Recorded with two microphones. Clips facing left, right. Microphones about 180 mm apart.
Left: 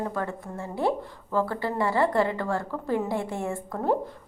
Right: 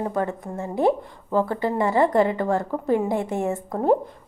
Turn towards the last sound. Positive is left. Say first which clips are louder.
# right 6 dB
turn(degrees=-20)  # may be behind; listen again after turning